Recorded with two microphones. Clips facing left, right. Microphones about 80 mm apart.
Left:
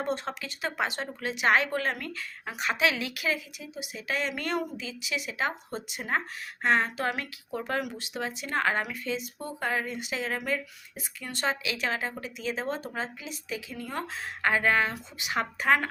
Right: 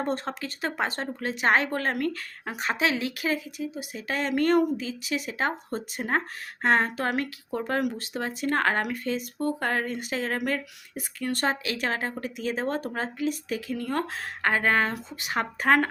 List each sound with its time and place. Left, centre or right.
0.0 s a woman's voice: right